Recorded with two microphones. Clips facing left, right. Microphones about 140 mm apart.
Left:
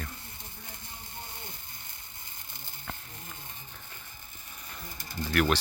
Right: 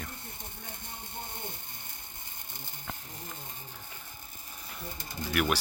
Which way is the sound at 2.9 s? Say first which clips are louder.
Even; 15° right (ahead or behind).